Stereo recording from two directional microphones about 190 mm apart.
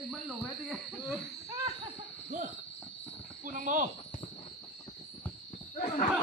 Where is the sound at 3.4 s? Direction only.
45° right (ahead or behind).